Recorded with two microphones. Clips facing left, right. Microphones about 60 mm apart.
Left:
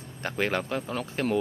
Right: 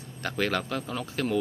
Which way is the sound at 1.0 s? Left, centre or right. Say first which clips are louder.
Left 1 dB; left.